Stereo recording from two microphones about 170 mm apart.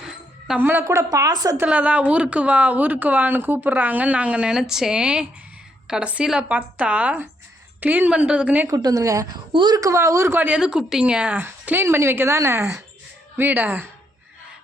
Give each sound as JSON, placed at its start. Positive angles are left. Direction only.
{"t": 0.0, "sound": "a woman's voice", "side_deg": -5}
{"t": 1.5, "sound": "speech", "side_deg": -10}
{"t": 8.7, "sound": "a woman's voice", "side_deg": -20}